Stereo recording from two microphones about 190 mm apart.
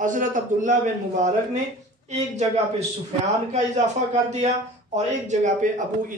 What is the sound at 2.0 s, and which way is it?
A man's voice, 35° right (ahead or behind).